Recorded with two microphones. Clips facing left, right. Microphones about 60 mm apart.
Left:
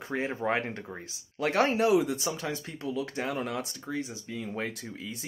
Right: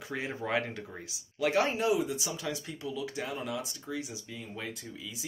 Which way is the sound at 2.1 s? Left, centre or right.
Left.